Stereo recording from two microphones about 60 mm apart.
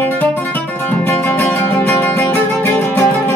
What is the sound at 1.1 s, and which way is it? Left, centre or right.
Music, left.